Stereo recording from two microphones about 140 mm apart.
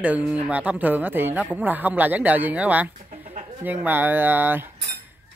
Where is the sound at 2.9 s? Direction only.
55° right (ahead or behind).